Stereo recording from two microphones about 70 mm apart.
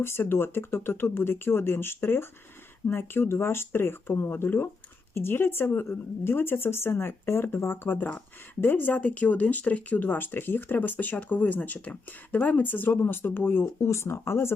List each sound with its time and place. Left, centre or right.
0.0 s speech: left
13.8 s speech: left